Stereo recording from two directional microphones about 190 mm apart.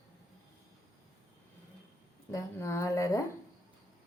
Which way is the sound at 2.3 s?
15° left (ahead or behind).